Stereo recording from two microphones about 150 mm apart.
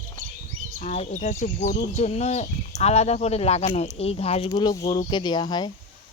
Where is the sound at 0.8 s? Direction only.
50° left (ahead or behind).